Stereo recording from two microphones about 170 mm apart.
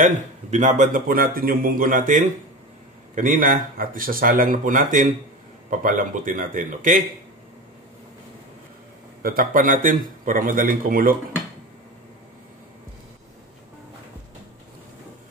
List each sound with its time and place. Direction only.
0.0 s speech: 45° right (ahead or behind)
9.2 s speech: 60° right (ahead or behind)